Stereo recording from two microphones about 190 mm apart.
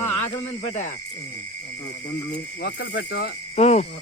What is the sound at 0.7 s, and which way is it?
Speech, 40° left (ahead or behind).